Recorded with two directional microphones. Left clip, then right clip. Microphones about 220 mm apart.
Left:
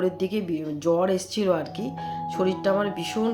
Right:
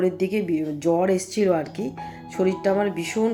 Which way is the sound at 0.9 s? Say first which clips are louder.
Right 1 dB; 5° right (ahead or behind).